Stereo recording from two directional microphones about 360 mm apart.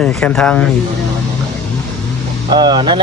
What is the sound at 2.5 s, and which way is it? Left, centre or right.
Speech, centre.